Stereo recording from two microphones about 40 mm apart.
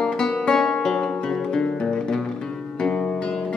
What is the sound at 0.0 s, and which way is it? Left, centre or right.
Music, centre.